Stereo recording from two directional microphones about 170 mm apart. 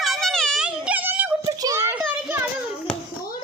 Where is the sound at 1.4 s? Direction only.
20° right (ahead or behind).